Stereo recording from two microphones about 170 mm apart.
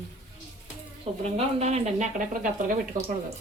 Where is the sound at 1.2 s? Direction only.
40° right (ahead or behind).